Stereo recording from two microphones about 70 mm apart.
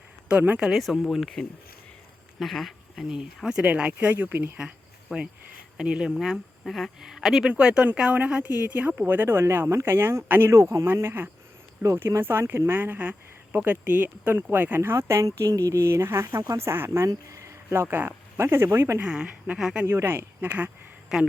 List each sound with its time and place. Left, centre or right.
0.7 s speech: centre
4.1 s speech: right
5.0 s speech: centre; by 10.5 s right
10.5 s speech: right
14.8 s speech: right
17.1 s speech: right
19.0 s speech: centre
19.8 s speech: right
21.1 s speech: centre